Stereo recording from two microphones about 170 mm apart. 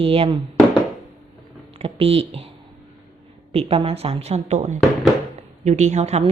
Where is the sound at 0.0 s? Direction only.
35° right (ahead or behind).